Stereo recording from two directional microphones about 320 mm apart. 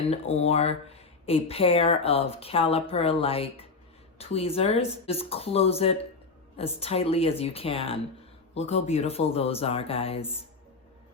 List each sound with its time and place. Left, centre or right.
0.0 s speech: centre